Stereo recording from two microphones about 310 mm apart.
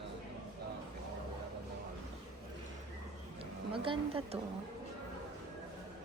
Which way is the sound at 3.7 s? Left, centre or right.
Centre.